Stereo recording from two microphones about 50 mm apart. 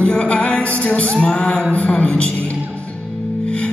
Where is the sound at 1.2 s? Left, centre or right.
Centre.